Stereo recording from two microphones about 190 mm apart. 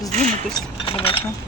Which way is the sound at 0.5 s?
25° left (ahead or behind).